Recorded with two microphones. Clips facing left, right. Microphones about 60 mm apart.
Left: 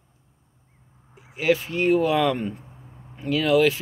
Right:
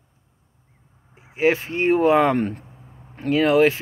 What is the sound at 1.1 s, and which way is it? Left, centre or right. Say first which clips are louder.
Speech: right 2 dB; right.